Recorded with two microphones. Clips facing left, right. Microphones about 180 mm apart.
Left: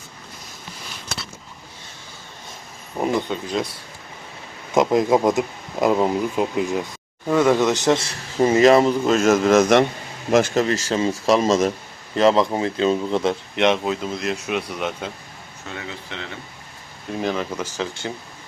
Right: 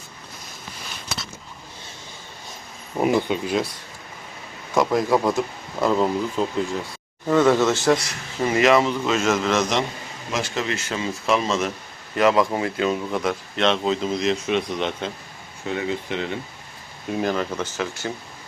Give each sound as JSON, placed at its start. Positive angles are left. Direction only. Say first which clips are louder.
{"t": 3.0, "sound": "speech", "louder": "right 2 dB", "side_deg": -5}
{"t": 4.7, "sound": "speech", "louder": "left 3 dB", "side_deg": 20}
{"t": 12.1, "sound": "speech", "louder": "left 2 dB", "side_deg": 30}
{"t": 13.8, "sound": "speech", "louder": "right 2 dB", "side_deg": 5}
{"t": 15.7, "sound": "speech", "louder": "right 8 dB", "side_deg": -15}
{"t": 17.2, "sound": "speech", "louder": "even", "side_deg": 0}